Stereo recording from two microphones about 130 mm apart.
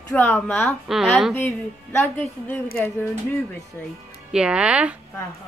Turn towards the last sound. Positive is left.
turn(degrees=-10)  # may be behind; listen again after turning